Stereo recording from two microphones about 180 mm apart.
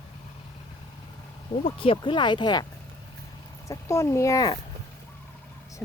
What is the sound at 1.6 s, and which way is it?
Speech, 30° left (ahead or behind).